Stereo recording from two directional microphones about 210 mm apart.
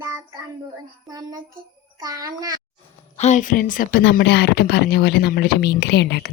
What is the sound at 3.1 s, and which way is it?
A woman's voice, 35° left (ahead or behind).